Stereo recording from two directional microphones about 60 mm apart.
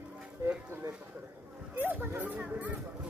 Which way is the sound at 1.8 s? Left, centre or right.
Right.